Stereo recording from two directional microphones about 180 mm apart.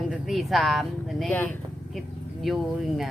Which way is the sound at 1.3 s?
10° left (ahead or behind).